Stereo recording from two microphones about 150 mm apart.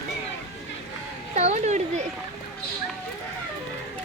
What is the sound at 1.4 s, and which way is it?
Speech, 50° right (ahead or behind).